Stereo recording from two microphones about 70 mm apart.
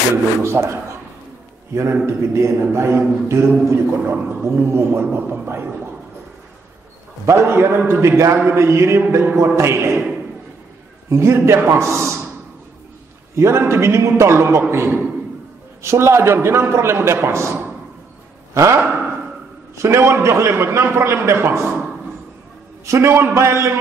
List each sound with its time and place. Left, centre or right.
0.1 s a man's voice: right
7.2 s a man's voice: right
11.1 s a man's voice: right
13.4 s a man's voice: right
19.8 s a man's voice: right
22.8 s a man's voice: right